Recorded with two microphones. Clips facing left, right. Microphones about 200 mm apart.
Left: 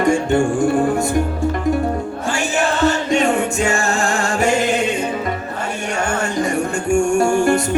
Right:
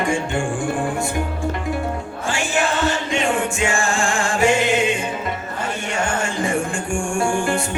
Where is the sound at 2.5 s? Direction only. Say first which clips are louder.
Left 4 dB; 40° left (ahead or behind).